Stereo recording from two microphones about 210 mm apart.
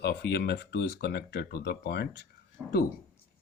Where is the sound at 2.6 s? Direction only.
5° right (ahead or behind).